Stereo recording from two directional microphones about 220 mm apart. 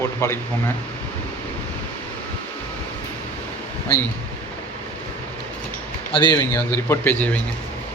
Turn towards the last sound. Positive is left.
turn(degrees=10)  # may be behind; listen again after turning